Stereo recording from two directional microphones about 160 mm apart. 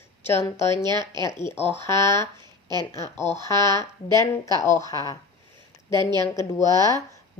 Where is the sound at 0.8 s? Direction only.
25° right (ahead or behind).